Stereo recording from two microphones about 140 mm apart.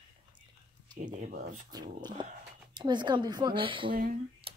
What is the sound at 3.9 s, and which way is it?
Speech, 90° right.